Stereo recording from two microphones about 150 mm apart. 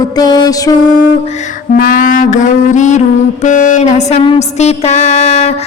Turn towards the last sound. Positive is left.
turn(degrees=45)  # may be behind; listen again after turning